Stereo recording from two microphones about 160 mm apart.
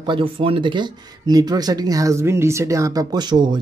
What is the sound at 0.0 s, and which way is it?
Speech, 30° right (ahead or behind).